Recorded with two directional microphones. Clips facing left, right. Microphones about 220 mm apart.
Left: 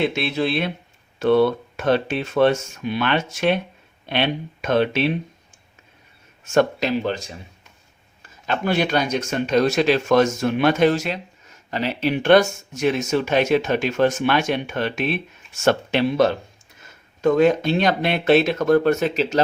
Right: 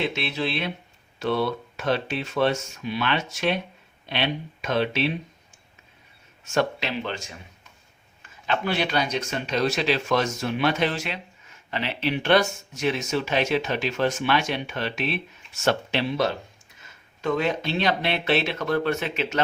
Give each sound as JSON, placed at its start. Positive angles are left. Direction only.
{"t": 0.1, "sound": "speech", "side_deg": 50}
{"t": 6.4, "sound": "speech", "side_deg": 50}
{"t": 8.4, "sound": "speech", "side_deg": 45}